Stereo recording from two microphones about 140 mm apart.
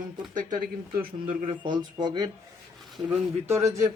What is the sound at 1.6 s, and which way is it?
Speech, 30° right (ahead or behind).